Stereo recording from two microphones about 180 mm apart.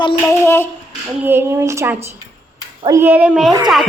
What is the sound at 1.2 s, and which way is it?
A child's voice, 10° right (ahead or behind).